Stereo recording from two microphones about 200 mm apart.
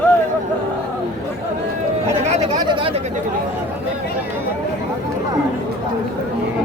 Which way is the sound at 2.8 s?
25° right (ahead or behind).